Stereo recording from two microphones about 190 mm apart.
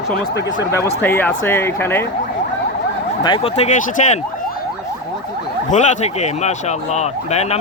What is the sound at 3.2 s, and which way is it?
Speech, 30° left (ahead or behind).